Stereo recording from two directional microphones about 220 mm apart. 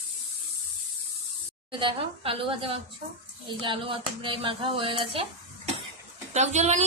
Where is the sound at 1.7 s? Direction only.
20° right (ahead or behind).